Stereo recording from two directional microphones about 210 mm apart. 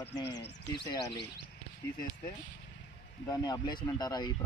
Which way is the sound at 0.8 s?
15° left (ahead or behind).